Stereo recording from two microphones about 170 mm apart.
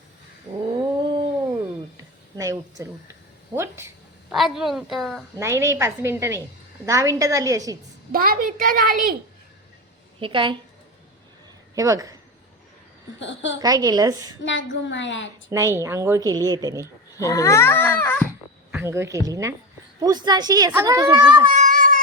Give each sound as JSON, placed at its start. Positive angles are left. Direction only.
{"t": 0.8, "sound": "cat", "side_deg": -30}
{"t": 2.3, "sound": "speech", "side_deg": -20}
{"t": 4.3, "sound": "a woman's voice", "side_deg": 0}
{"t": 5.4, "sound": "a woman's voice", "side_deg": -15}
{"t": 8.1, "sound": "a woman's voice", "side_deg": -55}
{"t": 10.2, "sound": "a woman's voice", "side_deg": -30}
{"t": 11.7, "sound": "speech", "side_deg": -20}
{"t": 13.1, "sound": "a woman's voice", "side_deg": 90}
{"t": 13.6, "sound": "a woman's voice", "side_deg": -20}
{"t": 14.4, "sound": "a woman's voice", "side_deg": 90}
{"t": 15.4, "sound": "a woman's voice", "side_deg": -15}
{"t": 17.2, "sound": "a child's voice", "side_deg": 20}
{"t": 18.7, "sound": "a woman's voice", "side_deg": -15}
{"t": 21.5, "sound": "cat", "side_deg": -50}